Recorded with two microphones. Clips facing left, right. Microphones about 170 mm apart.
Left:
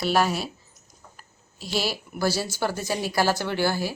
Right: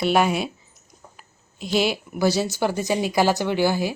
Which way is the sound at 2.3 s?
20° right (ahead or behind).